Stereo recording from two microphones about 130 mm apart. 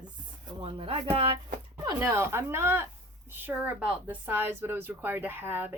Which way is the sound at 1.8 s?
20° right (ahead or behind).